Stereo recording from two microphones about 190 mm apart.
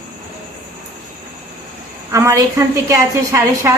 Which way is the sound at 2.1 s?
15° right (ahead or behind).